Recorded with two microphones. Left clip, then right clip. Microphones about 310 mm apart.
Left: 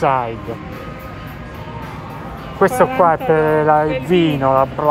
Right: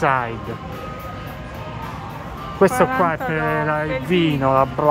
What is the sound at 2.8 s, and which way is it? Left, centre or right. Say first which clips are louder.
Speech: left 5 dB; centre.